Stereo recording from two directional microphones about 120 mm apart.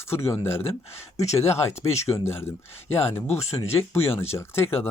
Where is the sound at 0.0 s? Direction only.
20° left (ahead or behind).